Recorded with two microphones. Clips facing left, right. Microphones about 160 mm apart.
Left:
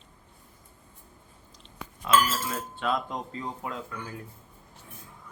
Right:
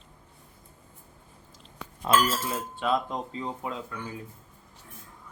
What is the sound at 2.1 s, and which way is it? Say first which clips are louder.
Dishes: even; 45° right (ahead or behind).